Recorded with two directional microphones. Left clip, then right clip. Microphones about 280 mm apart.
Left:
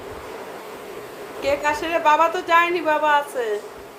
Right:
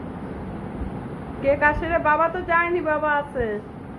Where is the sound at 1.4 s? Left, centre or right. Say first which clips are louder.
Right 2 dB; centre.